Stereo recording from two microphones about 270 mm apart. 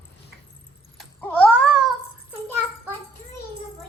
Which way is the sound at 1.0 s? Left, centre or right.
Centre.